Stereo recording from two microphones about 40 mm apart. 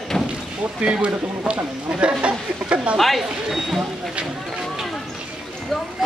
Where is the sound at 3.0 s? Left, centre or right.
Centre.